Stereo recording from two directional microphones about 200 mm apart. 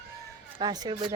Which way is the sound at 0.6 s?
20° right (ahead or behind).